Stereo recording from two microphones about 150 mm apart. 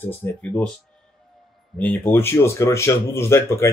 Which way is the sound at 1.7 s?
10° left (ahead or behind).